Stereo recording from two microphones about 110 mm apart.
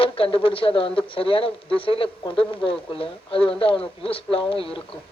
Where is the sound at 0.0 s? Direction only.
55° left (ahead or behind).